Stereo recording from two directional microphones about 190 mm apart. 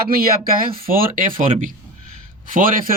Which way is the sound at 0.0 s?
50° right (ahead or behind).